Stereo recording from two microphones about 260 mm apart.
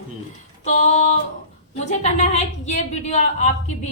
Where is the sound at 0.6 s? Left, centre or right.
Left.